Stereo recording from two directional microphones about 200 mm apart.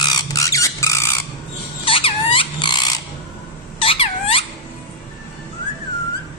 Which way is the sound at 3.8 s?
25° left (ahead or behind).